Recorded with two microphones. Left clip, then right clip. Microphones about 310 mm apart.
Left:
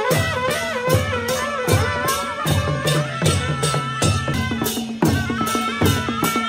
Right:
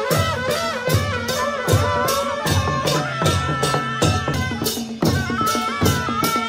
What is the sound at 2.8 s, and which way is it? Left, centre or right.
Music, right.